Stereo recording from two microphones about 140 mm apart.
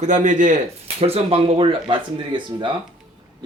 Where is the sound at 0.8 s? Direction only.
45° right (ahead or behind).